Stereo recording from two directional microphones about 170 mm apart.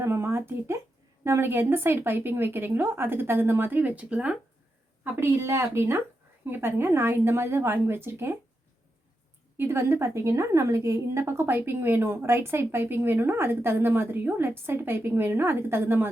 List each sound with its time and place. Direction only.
0.0 s a sound: 15° right (ahead or behind)
1.2 s a woman's voice: 15° right (ahead or behind)
9.6 s a woman's voice: 15° right (ahead or behind)